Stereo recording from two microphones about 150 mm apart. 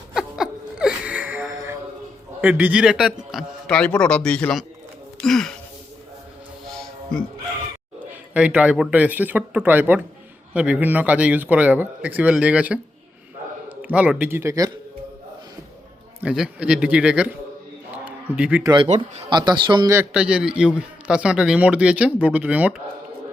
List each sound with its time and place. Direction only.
0.1 s wheeze: 5° right (ahead or behind)
2.4 s a man's voice: 10° right (ahead or behind)
3.1 s a man's voice: 5° left (ahead or behind)
5.2 s music: 5° left (ahead or behind)
6.7 s music: 5° left (ahead or behind)
8.3 s a man's voice: 10° right (ahead or behind)
16.2 s a man's voice: 5° right (ahead or behind)
17.9 s a sound: 10° right (ahead or behind)
18.6 s speech: 30° right (ahead or behind)
18.9 s speech: 45° right (ahead or behind)
19.3 s speech: 30° right (ahead or behind)
19.9 s a man's voice: 10° right (ahead or behind)